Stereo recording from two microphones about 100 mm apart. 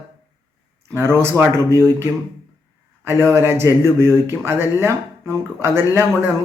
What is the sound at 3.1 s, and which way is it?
Speech, 25° right (ahead or behind).